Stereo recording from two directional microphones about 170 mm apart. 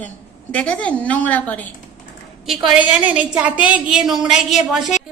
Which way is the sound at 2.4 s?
5° right (ahead or behind).